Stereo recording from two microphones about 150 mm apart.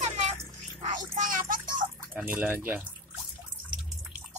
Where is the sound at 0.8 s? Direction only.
60° right (ahead or behind).